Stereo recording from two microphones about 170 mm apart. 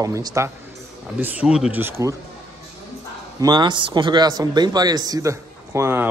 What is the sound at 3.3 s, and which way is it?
A man's voice, 25° right (ahead or behind).